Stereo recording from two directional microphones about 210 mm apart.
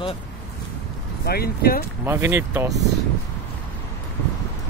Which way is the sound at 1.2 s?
45° left (ahead or behind).